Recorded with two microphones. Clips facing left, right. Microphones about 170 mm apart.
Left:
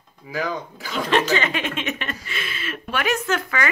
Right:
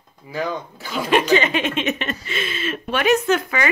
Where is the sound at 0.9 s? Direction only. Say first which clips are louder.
Right 3 dB; 10° right (ahead or behind).